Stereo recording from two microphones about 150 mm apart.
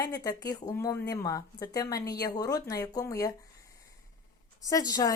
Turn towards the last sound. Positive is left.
turn(degrees=25)  # may be behind; listen again after turning